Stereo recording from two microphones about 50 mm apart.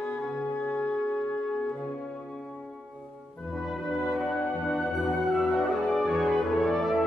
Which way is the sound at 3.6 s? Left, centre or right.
Centre.